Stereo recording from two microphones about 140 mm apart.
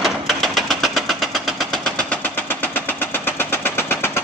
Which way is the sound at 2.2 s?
10° left (ahead or behind).